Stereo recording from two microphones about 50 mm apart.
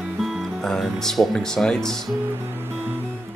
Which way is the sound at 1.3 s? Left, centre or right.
Centre.